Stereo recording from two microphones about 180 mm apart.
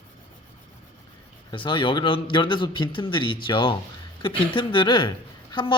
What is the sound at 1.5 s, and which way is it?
A woman's voice, 25° left (ahead or behind).